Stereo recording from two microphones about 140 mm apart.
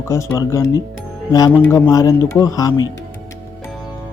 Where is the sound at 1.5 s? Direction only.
15° left (ahead or behind).